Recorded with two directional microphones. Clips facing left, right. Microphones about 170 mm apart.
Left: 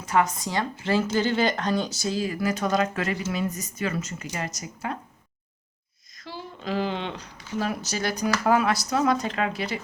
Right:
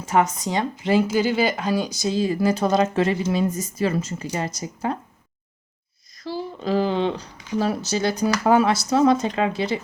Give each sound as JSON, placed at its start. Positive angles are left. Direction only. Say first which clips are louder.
{"t": 0.0, "sound": "speech", "louder": "right 3 dB", "side_deg": -25}
{"t": 6.1, "sound": "speech", "louder": "right 9 dB", "side_deg": -35}